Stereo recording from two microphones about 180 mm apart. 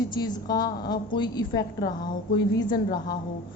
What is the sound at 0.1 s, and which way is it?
A woman's voice, 20° left (ahead or behind).